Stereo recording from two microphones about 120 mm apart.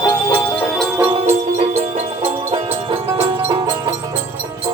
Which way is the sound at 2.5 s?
50° right (ahead or behind).